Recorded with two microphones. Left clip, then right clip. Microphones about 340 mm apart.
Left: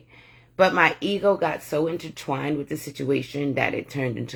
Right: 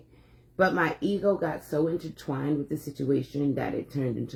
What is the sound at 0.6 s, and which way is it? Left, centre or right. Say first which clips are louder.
Speech: left 6 dB; centre.